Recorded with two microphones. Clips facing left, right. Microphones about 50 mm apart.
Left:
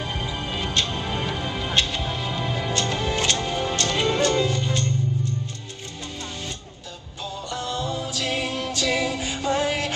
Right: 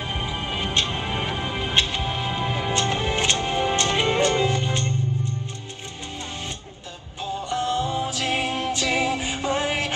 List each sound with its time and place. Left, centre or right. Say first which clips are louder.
0.0 s music: right 1 dB; right
7.3 s music: right 5 dB; right